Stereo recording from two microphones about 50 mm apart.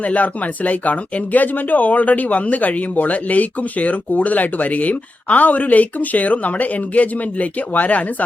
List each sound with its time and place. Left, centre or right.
0.0 s speech: left